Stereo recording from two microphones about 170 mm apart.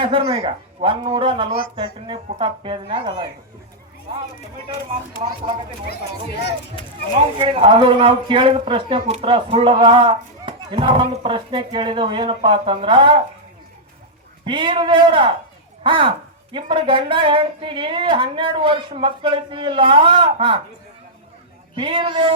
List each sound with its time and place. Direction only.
0.0 s speech: 30° right (ahead or behind)
1.5 s speech: 60° left (ahead or behind)
1.7 s speech: 30° right (ahead or behind)
7.3 s speech: 30° right (ahead or behind)
14.4 s speech: 30° right (ahead or behind)
21.8 s speech: 30° right (ahead or behind)